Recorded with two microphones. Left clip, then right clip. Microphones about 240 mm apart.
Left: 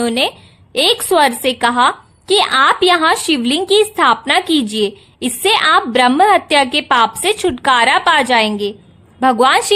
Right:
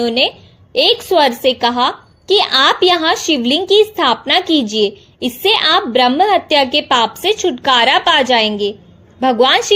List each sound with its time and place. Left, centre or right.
0.0 s a woman's voice: centre
8.4 s a woman's voice: left
9.2 s a woman's voice: centre